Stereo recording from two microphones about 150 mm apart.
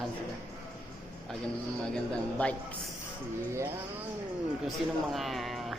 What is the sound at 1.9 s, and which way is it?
Speech, 5° left (ahead or behind).